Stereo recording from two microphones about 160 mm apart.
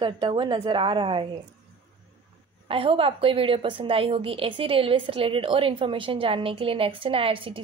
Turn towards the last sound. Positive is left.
turn(degrees=-35)  # may be behind; listen again after turning